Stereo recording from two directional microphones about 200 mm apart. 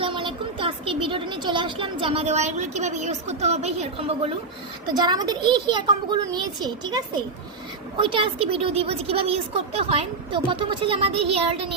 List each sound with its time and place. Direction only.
0.0 s a woman's voice: 25° right (ahead or behind)